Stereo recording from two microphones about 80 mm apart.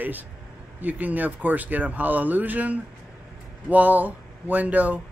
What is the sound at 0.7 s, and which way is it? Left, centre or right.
Speech, right.